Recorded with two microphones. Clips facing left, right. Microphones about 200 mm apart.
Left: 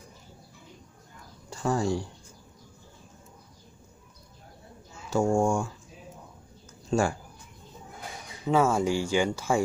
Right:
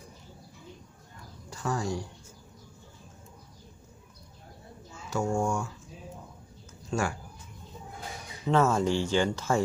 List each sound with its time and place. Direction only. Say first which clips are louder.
1.5 s speech: left 5 dB; 30° left (ahead or behind)
5.1 s speech: left 5 dB; 30° left (ahead or behind)
6.9 s speech: left 5 dB; 30° left (ahead or behind)
8.5 s speech: left 1 dB; 10° left (ahead or behind)